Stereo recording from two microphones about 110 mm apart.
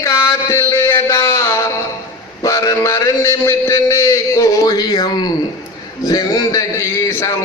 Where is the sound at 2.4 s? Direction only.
30° left (ahead or behind).